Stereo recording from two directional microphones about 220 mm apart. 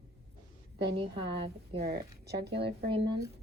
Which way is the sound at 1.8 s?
45° right (ahead or behind).